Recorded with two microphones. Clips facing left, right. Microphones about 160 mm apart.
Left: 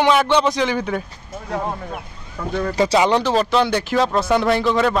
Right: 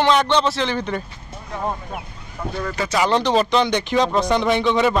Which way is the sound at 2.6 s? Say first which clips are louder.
Left 7 dB; 30° left (ahead or behind).